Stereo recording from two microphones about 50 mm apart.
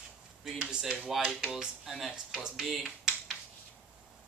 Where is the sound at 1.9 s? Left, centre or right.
Centre.